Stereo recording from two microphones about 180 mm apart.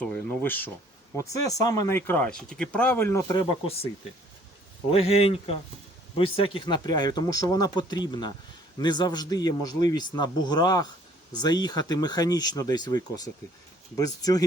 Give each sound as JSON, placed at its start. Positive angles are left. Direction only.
{"t": 0.0, "sound": "speech", "side_deg": 10}
{"t": 4.9, "sound": "speech", "side_deg": 35}